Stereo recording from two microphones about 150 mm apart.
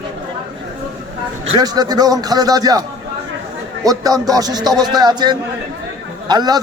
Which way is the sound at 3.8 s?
25° right (ahead or behind).